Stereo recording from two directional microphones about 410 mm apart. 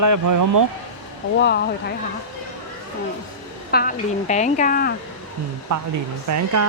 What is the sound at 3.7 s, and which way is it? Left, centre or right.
Speech, centre.